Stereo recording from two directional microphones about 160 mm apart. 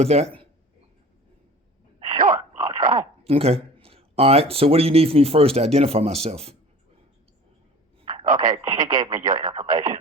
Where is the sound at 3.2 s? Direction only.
40° right (ahead or behind).